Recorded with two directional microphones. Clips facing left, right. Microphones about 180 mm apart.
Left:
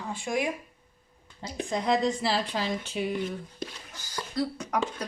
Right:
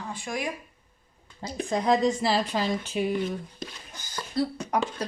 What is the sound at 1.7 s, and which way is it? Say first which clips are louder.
Speech: right 3 dB; 45° right (ahead or behind).